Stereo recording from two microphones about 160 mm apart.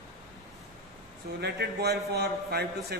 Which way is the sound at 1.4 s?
90° right.